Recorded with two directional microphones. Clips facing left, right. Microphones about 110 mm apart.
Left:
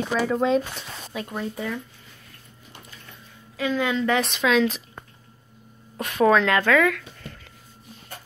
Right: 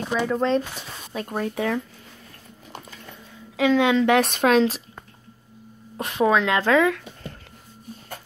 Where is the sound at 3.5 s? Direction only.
90° right.